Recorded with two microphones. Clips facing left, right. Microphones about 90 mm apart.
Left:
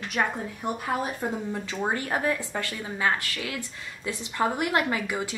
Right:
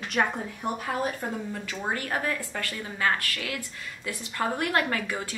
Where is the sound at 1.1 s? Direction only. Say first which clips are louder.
Left 3 dB; 25° left (ahead or behind).